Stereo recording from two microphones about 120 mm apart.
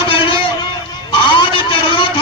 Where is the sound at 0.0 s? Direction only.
45° left (ahead or behind).